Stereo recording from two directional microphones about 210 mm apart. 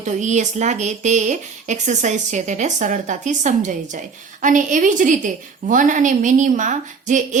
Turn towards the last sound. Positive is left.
turn(degrees=-35)  # may be behind; listen again after turning